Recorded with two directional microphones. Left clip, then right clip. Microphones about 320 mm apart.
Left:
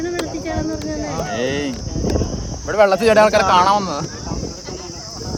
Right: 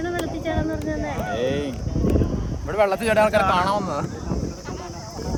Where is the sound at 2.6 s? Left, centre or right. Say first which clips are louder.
Left 7 dB; left.